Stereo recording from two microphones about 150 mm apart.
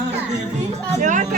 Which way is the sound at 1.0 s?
55° right (ahead or behind).